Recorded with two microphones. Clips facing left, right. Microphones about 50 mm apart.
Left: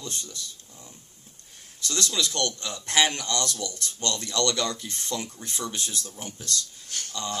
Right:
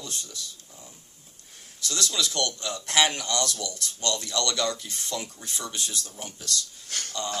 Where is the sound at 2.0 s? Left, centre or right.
Left.